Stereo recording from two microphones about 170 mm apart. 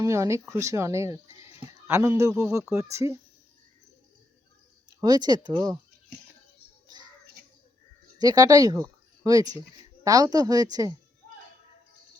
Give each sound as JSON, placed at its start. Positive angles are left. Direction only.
{"t": 0.0, "sound": "speech", "side_deg": -15}
{"t": 4.9, "sound": "a woman's voice", "side_deg": -25}
{"t": 8.2, "sound": "a woman's voice", "side_deg": -20}
{"t": 8.8, "sound": "a sound", "side_deg": -20}
{"t": 10.0, "sound": "a woman's voice", "side_deg": -20}